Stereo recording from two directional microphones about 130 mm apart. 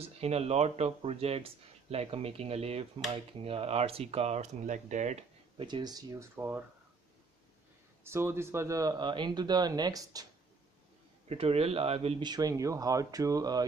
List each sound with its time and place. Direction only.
0.0 s speech: 50° right (ahead or behind)
5.6 s speech: 35° right (ahead or behind)
6.3 s speech: 15° right (ahead or behind)
8.0 s speech: 20° right (ahead or behind)
11.2 s speech: 50° right (ahead or behind)
12.2 s speech: 30° right (ahead or behind)